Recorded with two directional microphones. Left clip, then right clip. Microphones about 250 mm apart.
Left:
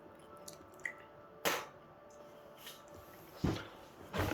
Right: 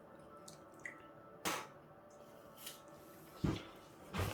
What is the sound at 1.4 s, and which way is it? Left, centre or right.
Music, centre.